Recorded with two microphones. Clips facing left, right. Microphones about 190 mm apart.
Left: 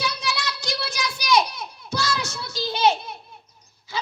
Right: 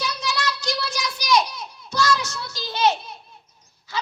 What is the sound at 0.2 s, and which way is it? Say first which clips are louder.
Child singing: right 2 dB; 55° left (ahead or behind).